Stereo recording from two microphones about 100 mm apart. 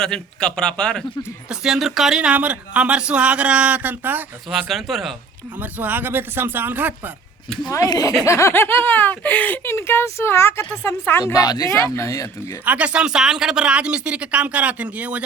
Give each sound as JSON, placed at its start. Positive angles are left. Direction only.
{"t": 0.0, "sound": "a man's voice", "side_deg": 5}
{"t": 1.5, "sound": "speech", "side_deg": -5}
{"t": 4.4, "sound": "speech", "side_deg": 0}
{"t": 5.5, "sound": "speech", "side_deg": -15}
{"t": 7.6, "sound": "speech", "side_deg": 40}
{"t": 12.6, "sound": "speech", "side_deg": -15}